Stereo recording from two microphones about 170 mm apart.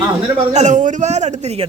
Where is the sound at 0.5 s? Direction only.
45° right (ahead or behind).